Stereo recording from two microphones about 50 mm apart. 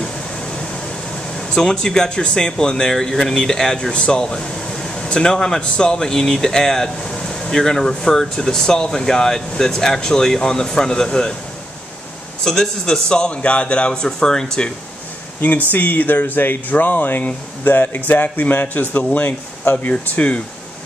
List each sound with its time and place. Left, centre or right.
0.0 s a sound: centre
1.3 s speech: centre
12.4 s speech: centre
15.4 s speech: left
19.9 s speech: left